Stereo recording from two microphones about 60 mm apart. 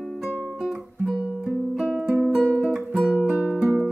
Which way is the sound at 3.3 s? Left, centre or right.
Right.